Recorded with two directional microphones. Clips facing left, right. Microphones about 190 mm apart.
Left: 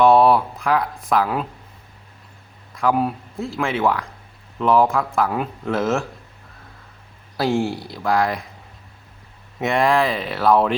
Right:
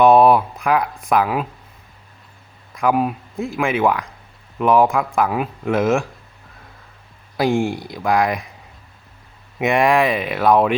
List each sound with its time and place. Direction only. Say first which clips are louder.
0.0 s speech: right 2 dB; 15° right (ahead or behind)
2.7 s speech: right 1 dB; 15° right (ahead or behind)
7.3 s speech: right 2 dB; 15° right (ahead or behind)
9.6 s speech: right 2 dB; 15° right (ahead or behind)